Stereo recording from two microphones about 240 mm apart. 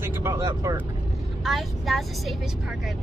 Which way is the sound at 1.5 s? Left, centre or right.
Centre.